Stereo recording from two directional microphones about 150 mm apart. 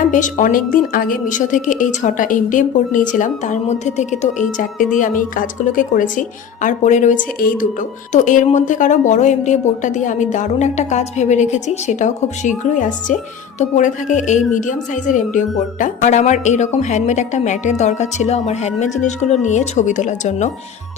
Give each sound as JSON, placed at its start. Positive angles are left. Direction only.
{"t": 0.1, "sound": "speech", "side_deg": 55}
{"t": 7.3, "sound": "speech", "side_deg": 65}